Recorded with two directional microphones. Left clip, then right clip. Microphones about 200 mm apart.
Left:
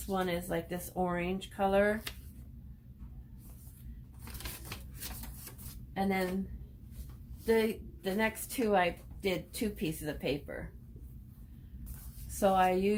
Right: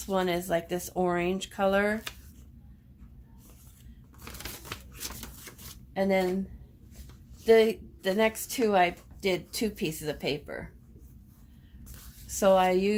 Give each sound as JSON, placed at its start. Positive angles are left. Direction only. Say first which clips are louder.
{"t": 0.1, "sound": "a woman's voice", "louder": "right 6 dB", "side_deg": -55}
{"t": 5.9, "sound": "speech", "louder": "right 7 dB", "side_deg": -45}
{"t": 7.4, "sound": "a woman's voice", "louder": "right 9 dB", "side_deg": -50}
{"t": 12.4, "sound": "a woman's voice", "louder": "right 5 dB", "side_deg": -50}